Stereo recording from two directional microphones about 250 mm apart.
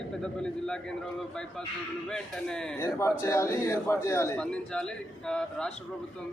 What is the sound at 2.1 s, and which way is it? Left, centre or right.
A man's voice, centre.